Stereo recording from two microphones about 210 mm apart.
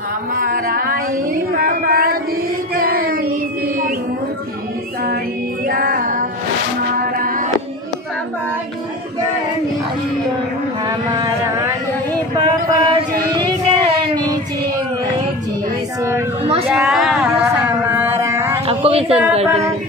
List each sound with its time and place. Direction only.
0.4 s female singing: 40° right (ahead or behind)
2.7 s child singing: 45° right (ahead or behind)
5.7 s music: 45° right (ahead or behind)
10.9 s vehicle: 20° right (ahead or behind)
16.6 s a sound: centre (ahead or behind)
18.7 s a sound: 25° right (ahead or behind)